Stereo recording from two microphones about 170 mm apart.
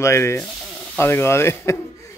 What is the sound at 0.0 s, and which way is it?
Speech, 15° left (ahead or behind).